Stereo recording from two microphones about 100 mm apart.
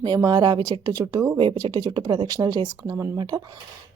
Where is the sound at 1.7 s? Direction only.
45° right (ahead or behind).